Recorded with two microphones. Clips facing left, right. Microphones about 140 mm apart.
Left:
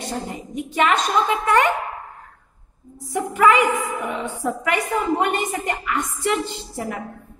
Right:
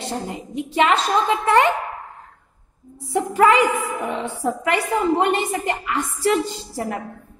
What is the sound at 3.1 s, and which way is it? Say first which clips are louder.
A woman's voice: right 1 dB; 30° right (ahead or behind).